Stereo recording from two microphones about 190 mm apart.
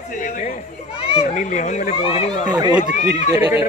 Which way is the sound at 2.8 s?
45° left (ahead or behind).